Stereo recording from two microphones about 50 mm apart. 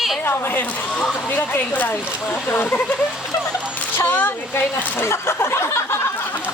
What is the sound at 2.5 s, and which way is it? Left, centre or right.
Speech, left.